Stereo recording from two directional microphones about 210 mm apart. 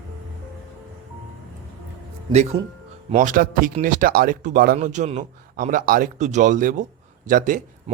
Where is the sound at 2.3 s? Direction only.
30° right (ahead or behind).